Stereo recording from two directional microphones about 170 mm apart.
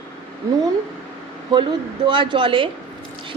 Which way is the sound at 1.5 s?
30° right (ahead or behind).